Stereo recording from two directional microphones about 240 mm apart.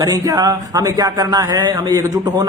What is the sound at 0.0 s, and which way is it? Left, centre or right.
A man's voice, centre.